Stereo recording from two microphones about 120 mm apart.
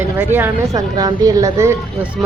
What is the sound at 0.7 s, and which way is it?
Speech, 35° right (ahead or behind).